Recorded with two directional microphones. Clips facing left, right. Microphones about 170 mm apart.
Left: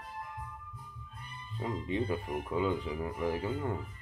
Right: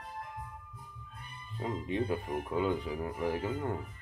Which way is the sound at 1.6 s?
5° right (ahead or behind).